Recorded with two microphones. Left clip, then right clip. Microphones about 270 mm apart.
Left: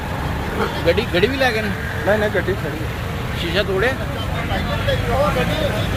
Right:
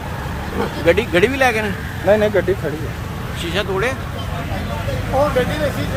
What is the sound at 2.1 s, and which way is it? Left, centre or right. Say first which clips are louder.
Speech: right 4 dB; right.